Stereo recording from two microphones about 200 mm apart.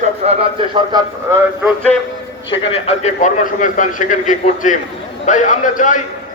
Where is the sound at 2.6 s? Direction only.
30° left (ahead or behind).